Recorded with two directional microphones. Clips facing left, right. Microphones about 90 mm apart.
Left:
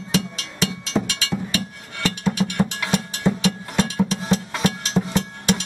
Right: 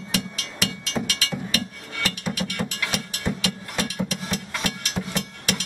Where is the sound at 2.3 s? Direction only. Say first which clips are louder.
Left 6 dB; 30° left (ahead or behind).